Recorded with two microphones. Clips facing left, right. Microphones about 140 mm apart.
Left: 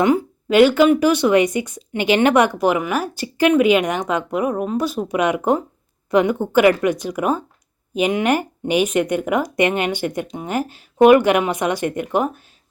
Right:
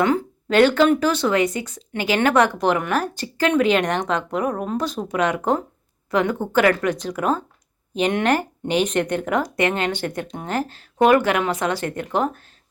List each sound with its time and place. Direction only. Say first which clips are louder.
0.0 s speech: left 3 dB; 10° left (ahead or behind)